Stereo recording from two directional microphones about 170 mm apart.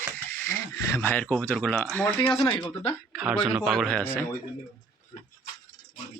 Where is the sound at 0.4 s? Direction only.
15° left (ahead or behind).